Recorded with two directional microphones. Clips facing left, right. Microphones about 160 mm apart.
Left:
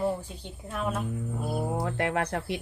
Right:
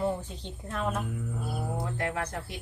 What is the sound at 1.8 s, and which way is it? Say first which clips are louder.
Speech: left 4 dB; 70° left (ahead or behind).